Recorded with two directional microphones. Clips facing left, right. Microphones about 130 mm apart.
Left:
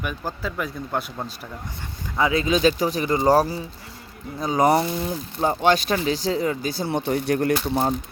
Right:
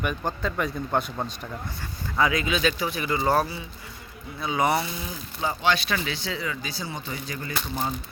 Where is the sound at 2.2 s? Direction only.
30° left (ahead or behind); by 7.9 s 65° left (ahead or behind).